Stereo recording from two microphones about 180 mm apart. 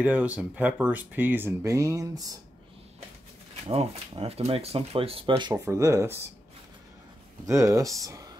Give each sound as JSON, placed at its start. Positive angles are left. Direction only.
{"t": 0.0, "sound": "speech", "side_deg": -10}
{"t": 3.6, "sound": "speech", "side_deg": -30}
{"t": 5.5, "sound": "speech", "side_deg": -15}
{"t": 7.4, "sound": "speech", "side_deg": -15}